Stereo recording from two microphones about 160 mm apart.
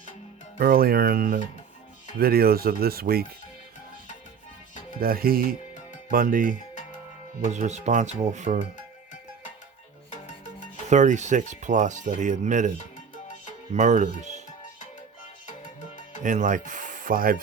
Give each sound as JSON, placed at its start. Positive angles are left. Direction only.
{"t": 0.6, "sound": "speech", "side_deg": -70}
{"t": 4.9, "sound": "speech", "side_deg": -70}
{"t": 7.4, "sound": "speech", "side_deg": -50}
{"t": 10.8, "sound": "speech", "side_deg": -50}
{"t": 13.7, "sound": "speech", "side_deg": -50}
{"t": 16.2, "sound": "speech", "side_deg": -50}